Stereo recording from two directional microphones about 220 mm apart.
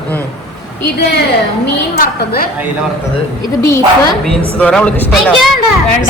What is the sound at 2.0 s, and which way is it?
Speech, 45° left (ahead or behind).